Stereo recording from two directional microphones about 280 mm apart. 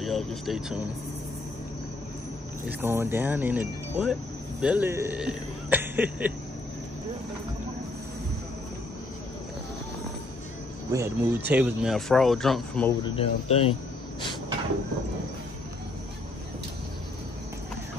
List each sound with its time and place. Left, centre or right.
0.0 s speech: centre
2.8 s speech: centre
10.9 s speech: centre
13.0 s speech: centre